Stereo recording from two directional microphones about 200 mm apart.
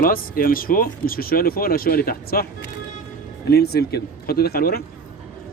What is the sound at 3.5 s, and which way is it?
Speech, 55° left (ahead or behind).